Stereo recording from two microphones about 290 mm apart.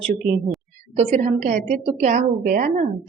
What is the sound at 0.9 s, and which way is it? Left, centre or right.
Speech, right.